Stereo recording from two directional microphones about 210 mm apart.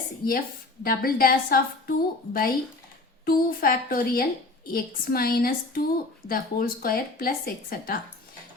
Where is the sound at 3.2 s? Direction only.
45° left (ahead or behind).